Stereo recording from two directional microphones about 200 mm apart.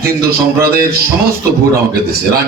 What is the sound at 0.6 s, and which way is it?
Speech, 50° right (ahead or behind).